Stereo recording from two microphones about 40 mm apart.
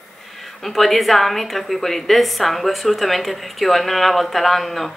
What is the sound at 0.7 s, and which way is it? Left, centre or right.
A woman's voice, centre.